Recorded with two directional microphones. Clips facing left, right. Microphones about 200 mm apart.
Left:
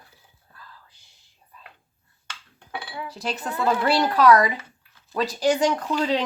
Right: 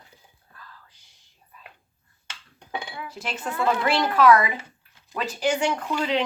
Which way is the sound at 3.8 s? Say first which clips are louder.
Left 1 dB; 35° left (ahead or behind).